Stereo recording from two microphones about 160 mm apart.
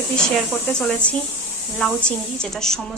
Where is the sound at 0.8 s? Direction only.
5° left (ahead or behind).